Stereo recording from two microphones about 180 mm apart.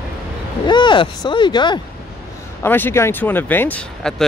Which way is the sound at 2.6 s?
10° left (ahead or behind).